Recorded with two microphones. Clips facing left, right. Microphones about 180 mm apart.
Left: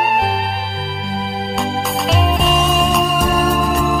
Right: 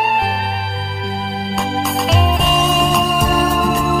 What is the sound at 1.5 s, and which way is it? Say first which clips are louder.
Music: right 1 dB; centre (ahead or behind).